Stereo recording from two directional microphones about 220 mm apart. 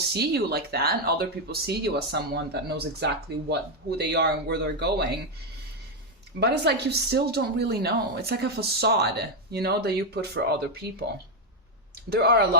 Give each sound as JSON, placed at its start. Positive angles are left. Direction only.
{"t": 0.1, "sound": "a woman's voice", "side_deg": -50}
{"t": 6.4, "sound": "a woman's voice", "side_deg": -50}
{"t": 12.1, "sound": "a woman's voice", "side_deg": -45}